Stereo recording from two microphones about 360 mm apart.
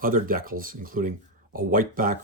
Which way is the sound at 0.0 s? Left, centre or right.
Right.